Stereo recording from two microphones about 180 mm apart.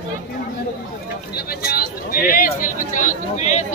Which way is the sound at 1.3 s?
60° left (ahead or behind).